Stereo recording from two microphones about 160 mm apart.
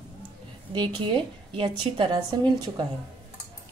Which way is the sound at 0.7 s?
30° right (ahead or behind).